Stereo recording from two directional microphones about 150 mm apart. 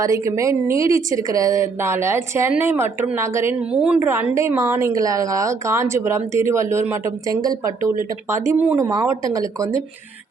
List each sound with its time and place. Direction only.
0.0 s a woman's voice: 20° right (ahead or behind)
3.6 s a woman's voice: 5° right (ahead or behind)
4.1 s a woman's voice: 15° right (ahead or behind)